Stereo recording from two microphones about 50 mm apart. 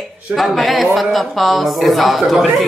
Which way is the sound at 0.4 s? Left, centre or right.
Centre.